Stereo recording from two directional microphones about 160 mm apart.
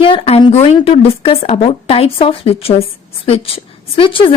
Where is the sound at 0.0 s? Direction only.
35° left (ahead or behind).